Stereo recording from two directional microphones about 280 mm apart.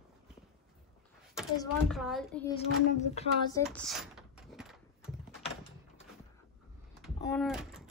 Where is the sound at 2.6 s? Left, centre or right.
Left.